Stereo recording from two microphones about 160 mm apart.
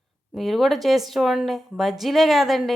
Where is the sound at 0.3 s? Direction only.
Centre (ahead or behind).